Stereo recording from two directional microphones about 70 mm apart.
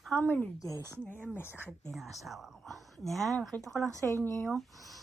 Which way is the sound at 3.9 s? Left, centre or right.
Right.